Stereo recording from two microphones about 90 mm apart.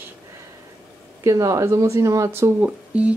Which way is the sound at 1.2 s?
40° right (ahead or behind).